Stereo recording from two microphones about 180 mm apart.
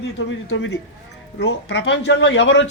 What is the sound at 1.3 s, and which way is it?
Speech, 80° left.